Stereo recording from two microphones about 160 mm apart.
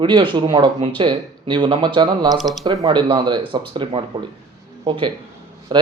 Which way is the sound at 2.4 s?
Centre (ahead or behind).